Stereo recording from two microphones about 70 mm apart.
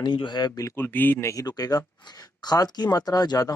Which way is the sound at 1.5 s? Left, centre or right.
Left.